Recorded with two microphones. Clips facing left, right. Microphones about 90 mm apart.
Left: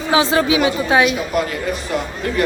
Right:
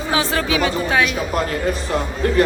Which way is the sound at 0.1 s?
20° left (ahead or behind).